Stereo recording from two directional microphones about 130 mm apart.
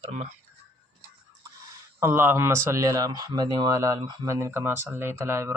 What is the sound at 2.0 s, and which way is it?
Speech, 20° right (ahead or behind).